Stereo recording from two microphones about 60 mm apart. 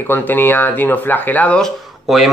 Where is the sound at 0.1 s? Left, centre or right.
Left.